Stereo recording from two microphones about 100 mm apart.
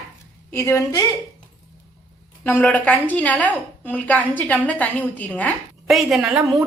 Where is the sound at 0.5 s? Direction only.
30° left (ahead or behind).